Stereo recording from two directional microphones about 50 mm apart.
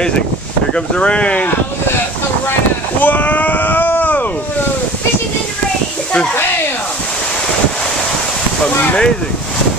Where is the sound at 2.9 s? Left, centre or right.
Left.